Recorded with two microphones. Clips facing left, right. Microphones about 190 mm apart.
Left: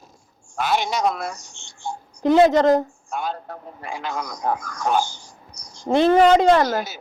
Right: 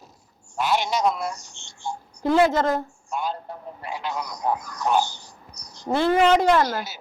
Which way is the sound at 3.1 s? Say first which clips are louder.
Left 1 dB; 55° left (ahead or behind).